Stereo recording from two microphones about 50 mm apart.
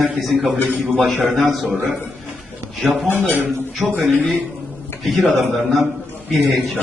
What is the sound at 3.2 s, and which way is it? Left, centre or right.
Speech, right.